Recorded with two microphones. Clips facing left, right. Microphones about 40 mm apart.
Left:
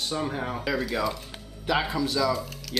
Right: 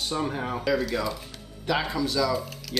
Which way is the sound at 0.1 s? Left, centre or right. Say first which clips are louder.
Right 2 dB; centre.